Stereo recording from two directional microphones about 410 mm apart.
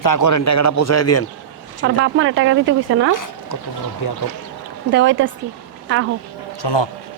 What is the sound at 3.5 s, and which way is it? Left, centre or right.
Speech, left.